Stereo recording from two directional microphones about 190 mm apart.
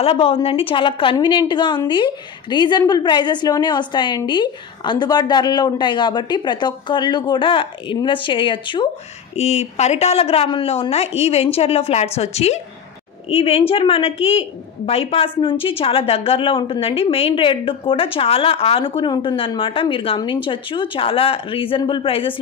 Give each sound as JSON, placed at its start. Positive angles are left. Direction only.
{"t": 0.0, "sound": "a woman's voice", "side_deg": 30}